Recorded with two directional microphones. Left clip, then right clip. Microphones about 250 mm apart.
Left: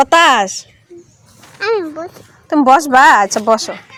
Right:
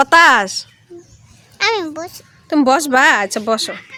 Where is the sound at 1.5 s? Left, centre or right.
Right.